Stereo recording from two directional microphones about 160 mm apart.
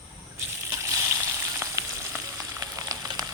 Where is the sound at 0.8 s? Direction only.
20° right (ahead or behind).